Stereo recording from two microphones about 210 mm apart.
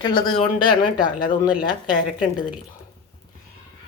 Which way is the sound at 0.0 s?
20° left (ahead or behind).